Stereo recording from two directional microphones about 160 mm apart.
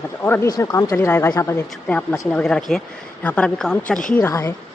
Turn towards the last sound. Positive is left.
turn(degrees=15)  # may be behind; listen again after turning